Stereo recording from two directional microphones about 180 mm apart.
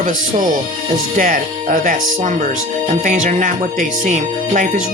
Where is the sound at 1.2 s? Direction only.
45° right (ahead or behind).